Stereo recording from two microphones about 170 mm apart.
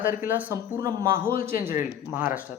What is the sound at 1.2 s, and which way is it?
Speech, 55° left (ahead or behind).